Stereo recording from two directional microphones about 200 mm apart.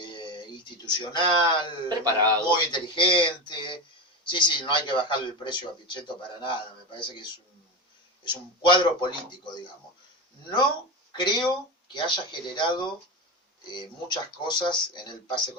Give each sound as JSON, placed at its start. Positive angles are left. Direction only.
{"t": 0.0, "sound": "a sound", "side_deg": 25}
{"t": 1.9, "sound": "a man's voice", "side_deg": -20}
{"t": 2.5, "sound": "a man's voice", "side_deg": 25}
{"t": 11.2, "sound": "a man's voice", "side_deg": 20}